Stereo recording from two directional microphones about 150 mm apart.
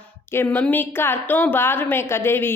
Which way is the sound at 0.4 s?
10° left (ahead or behind).